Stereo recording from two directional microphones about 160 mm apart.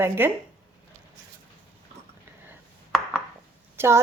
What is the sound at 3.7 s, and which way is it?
Speech, 15° right (ahead or behind).